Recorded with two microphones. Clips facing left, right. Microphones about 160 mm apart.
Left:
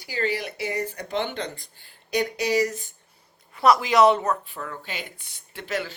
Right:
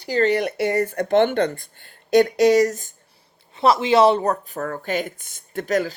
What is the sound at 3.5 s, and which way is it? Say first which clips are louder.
Speech: right 2 dB; 25° right (ahead or behind).